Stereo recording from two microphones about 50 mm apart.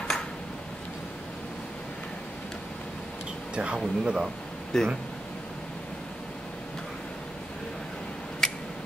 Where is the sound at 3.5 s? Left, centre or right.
Right.